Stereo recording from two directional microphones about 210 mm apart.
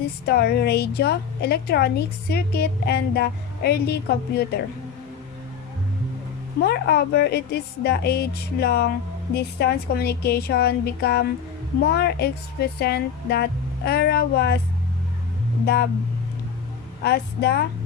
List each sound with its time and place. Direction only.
0.3 s a woman's voice: 50° left (ahead or behind)
6.6 s a woman's voice: 50° left (ahead or behind)
15.6 s a woman's voice: 50° left (ahead or behind)
17.0 s a woman's voice: 50° left (ahead or behind)